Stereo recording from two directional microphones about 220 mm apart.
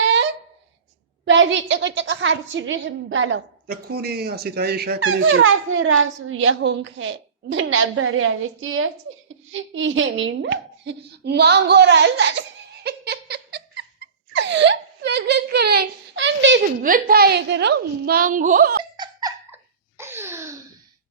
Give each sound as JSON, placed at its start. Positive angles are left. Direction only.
{"t": 0.0, "sound": "a sound", "side_deg": -55}
{"t": 1.2, "sound": "speech", "side_deg": -55}
{"t": 3.7, "sound": "a woman's voice", "side_deg": -45}
{"t": 4.9, "sound": "speech", "side_deg": -70}
{"t": 14.3, "sound": "whimper", "side_deg": -55}
{"t": 16.8, "sound": "a woman's voice", "side_deg": -40}
{"t": 18.9, "sound": "laughter", "side_deg": -15}
{"t": 20.0, "sound": "a sound", "side_deg": -10}